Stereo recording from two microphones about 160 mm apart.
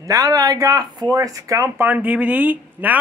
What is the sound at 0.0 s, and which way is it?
Speech, 20° right (ahead or behind).